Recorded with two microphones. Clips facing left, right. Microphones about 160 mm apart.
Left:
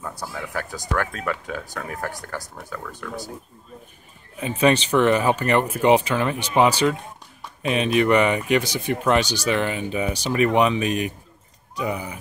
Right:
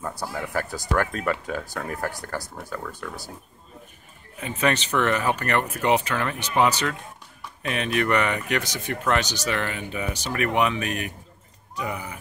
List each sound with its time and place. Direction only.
0.0 s speech: centre (ahead or behind)
4.4 s speech: 25° left (ahead or behind)
5.8 s speech: 25° left (ahead or behind)
6.0 s speech: 10° left (ahead or behind)